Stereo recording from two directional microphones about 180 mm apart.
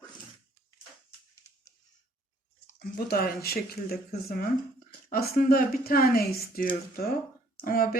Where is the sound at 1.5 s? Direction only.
20° left (ahead or behind).